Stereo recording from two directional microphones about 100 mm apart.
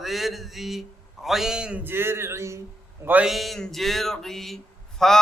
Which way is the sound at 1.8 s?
20° right (ahead or behind).